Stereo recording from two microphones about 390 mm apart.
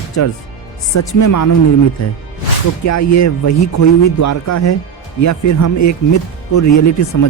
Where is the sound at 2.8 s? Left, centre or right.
Left.